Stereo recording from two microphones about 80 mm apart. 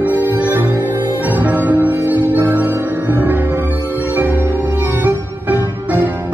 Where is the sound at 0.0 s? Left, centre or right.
Right.